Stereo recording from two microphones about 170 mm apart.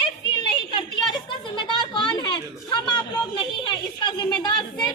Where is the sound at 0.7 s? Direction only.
30° left (ahead or behind).